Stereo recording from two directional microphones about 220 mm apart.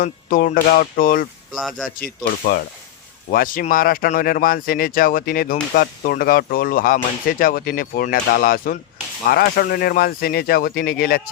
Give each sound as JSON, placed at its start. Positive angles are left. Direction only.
{"t": 0.0, "sound": "speech", "side_deg": 40}
{"t": 1.5, "sound": "a man's voice", "side_deg": 0}
{"t": 2.0, "sound": "speech", "side_deg": 40}